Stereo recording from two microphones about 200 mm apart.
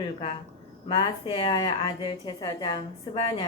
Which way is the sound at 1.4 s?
20° left (ahead or behind).